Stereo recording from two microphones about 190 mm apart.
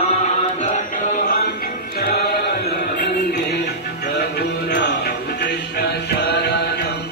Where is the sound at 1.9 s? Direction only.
50° left (ahead or behind).